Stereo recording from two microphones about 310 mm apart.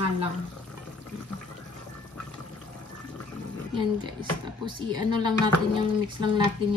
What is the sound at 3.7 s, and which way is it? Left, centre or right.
Speech, centre.